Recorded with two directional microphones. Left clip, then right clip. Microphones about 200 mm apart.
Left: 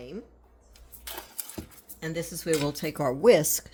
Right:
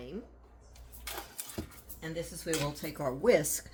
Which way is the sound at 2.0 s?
65° left (ahead or behind).